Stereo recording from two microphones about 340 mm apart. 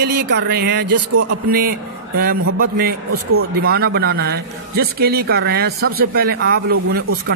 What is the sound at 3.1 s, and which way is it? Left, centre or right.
Speech, right.